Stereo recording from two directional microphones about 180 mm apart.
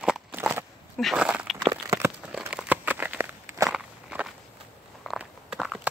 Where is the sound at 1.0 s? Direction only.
5° right (ahead or behind).